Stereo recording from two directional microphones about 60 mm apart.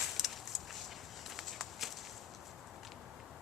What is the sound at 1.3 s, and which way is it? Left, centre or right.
Walk, centre.